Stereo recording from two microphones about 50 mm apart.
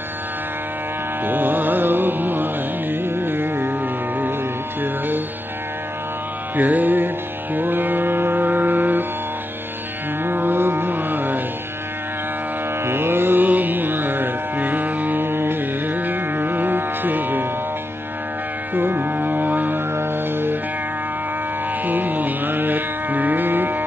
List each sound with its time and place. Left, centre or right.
1.2 s music: right
4.8 s music: right
6.5 s music: right
7.5 s mantra: right
10.2 s carnatic music: right
12.8 s music: right
18.8 s music: right
19.9 s music: right
21.8 s music: right